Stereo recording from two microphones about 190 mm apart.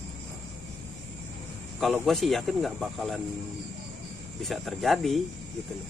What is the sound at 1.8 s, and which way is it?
Speech, centre (ahead or behind).